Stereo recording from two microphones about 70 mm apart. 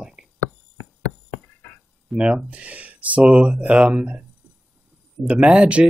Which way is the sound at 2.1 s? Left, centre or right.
Centre.